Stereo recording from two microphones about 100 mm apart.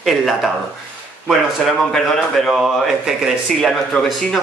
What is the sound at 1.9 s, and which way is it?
A man's voice, 5° left (ahead or behind).